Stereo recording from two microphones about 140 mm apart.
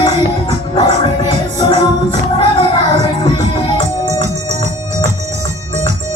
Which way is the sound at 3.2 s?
35° left (ahead or behind).